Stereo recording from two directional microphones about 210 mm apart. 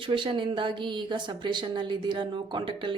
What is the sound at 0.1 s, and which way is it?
A woman's voice, 25° right (ahead or behind).